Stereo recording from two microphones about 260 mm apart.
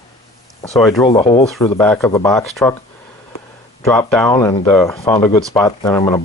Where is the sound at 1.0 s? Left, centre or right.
Centre.